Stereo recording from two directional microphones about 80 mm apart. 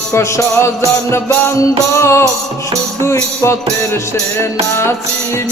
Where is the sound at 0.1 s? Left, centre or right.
Left.